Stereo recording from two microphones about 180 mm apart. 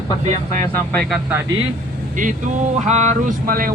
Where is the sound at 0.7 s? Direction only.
5° left (ahead or behind).